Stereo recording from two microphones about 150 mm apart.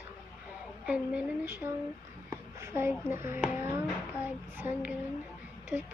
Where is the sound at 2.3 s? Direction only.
20° right (ahead or behind).